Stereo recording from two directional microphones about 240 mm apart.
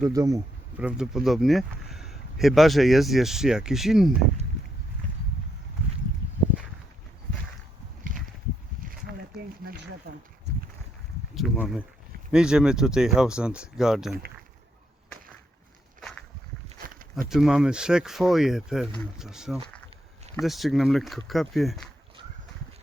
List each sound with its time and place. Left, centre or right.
0.1 s speech: centre
8.1 s a sound: right
11.3 s speech: centre
16.6 s walk: right
17.2 s speech: centre